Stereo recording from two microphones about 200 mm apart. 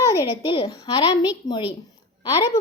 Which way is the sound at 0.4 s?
20° left (ahead or behind).